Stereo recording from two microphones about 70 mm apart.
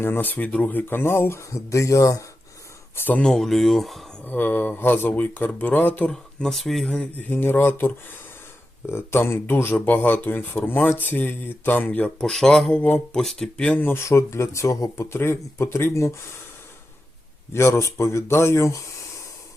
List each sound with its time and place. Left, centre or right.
0.0 s speech: left
2.9 s speech: left
3.2 s speech: centre
4.2 s speech: left
6.1 s speech: centre
6.8 s speech: centre; by 9.7 s left
9.7 s speech: left
12.3 s speech: centre
13.8 s speech: left
17.5 s speech: left